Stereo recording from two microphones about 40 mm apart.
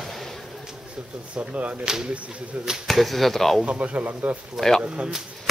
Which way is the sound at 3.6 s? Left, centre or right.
Right.